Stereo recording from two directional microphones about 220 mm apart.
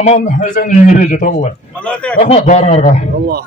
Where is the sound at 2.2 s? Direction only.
30° left (ahead or behind).